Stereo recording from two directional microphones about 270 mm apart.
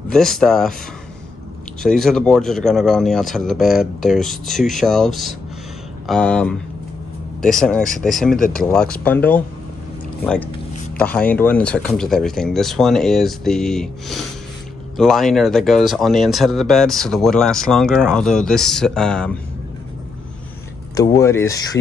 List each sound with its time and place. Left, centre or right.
0.1 s speech: centre
1.8 s speech: centre
20.9 s speech: centre